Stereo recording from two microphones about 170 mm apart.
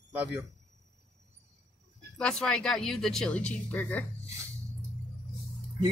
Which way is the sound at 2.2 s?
5° left (ahead or behind).